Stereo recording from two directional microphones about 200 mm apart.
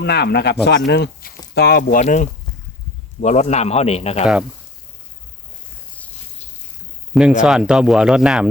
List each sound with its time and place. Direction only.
0.0 s speech: 55° left (ahead or behind); by 4.3 s 30° left (ahead or behind)
7.1 s speech: 5° right (ahead or behind)